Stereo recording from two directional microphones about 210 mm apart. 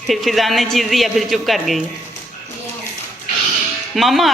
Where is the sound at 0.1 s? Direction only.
Centre (ahead or behind).